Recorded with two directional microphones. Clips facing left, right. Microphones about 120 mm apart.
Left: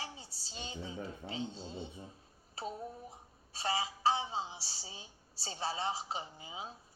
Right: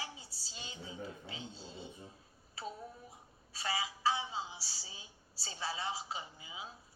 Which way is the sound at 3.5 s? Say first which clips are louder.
Left 3 dB; 30° left (ahead or behind).